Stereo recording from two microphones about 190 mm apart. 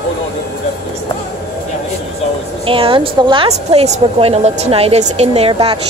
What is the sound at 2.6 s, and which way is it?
A woman's voice, 30° right (ahead or behind).